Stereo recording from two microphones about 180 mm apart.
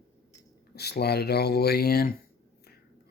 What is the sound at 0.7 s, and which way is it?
Speech, 65° left (ahead or behind).